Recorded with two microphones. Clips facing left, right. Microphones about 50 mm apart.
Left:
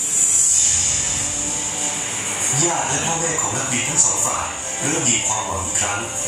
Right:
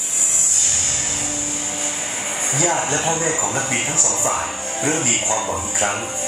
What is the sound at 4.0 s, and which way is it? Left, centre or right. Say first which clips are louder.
Speech: right 2 dB; centre.